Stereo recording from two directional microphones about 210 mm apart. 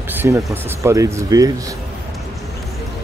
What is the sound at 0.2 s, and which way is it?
Speech, 10° right (ahead or behind).